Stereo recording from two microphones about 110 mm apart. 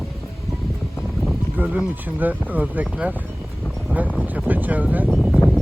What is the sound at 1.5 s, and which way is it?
Speech, 15° right (ahead or behind).